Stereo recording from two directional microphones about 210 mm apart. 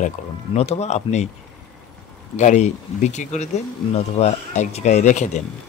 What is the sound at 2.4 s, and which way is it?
Speech, 35° left (ahead or behind).